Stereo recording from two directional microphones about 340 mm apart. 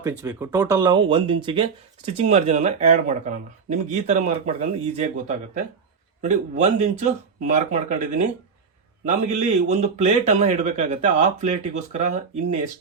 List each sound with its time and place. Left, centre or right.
0.0 s a man's voice: centre
6.2 s a man's voice: right